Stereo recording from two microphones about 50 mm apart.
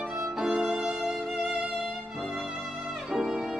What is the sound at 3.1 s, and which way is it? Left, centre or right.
Violin, centre.